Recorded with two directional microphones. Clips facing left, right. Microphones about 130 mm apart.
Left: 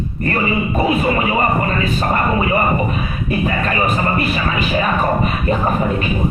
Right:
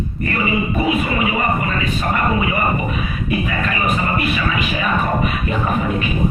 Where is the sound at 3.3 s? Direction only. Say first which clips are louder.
Left 3 dB; 35° left (ahead or behind).